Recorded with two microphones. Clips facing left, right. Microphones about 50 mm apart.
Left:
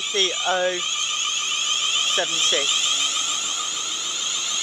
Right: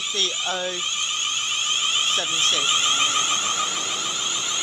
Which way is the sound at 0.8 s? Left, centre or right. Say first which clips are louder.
Even; centre.